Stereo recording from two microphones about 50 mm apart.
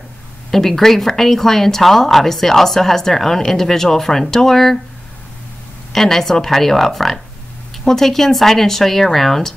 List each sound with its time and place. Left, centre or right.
0.5 s speech: centre
5.9 s speech: centre